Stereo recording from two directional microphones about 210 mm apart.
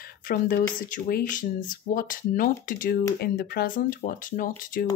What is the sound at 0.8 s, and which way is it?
Speech, 40° left (ahead or behind).